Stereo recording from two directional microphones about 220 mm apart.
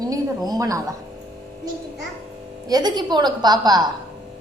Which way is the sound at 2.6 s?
20° right (ahead or behind).